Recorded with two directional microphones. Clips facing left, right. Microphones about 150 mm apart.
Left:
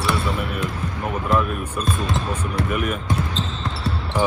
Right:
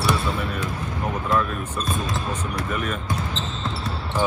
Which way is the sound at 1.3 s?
20° left (ahead or behind).